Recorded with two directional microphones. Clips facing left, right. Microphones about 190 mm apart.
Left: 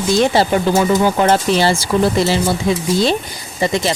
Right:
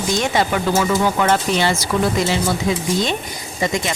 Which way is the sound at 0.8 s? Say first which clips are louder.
Left 4 dB; 20° left (ahead or behind).